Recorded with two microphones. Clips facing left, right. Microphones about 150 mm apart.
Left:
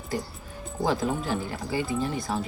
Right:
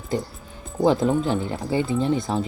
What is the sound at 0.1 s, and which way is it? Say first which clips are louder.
Speech: right 5 dB; 25° right (ahead or behind).